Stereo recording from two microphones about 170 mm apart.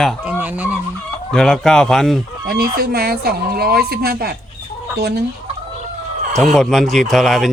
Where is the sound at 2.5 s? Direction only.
60° right (ahead or behind).